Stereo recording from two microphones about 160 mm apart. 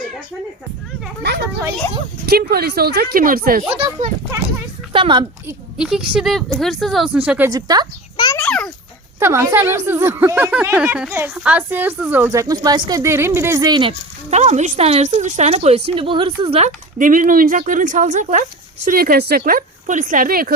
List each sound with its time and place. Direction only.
1.2 s speech: 90° right
2.2 s a woman's voice: 75° right (ahead or behind)
3.7 s speech: 35° right (ahead or behind)
5.7 s a woman's voice: 5° right (ahead or behind)
7.5 s speech: 25° right (ahead or behind)
8.1 s a sound: 25° left (ahead or behind)
8.4 s a child's voice: 5° left (ahead or behind)
9.1 s a woman's voice: 15° right (ahead or behind)
14.3 s a woman's voice: 45° right (ahead or behind)
18.9 s a woman's voice: 65° right (ahead or behind)